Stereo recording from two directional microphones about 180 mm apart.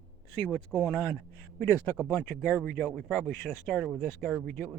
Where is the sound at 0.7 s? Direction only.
Centre (ahead or behind).